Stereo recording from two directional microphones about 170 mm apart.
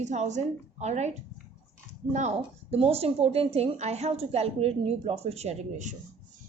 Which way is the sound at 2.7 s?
35° right (ahead or behind).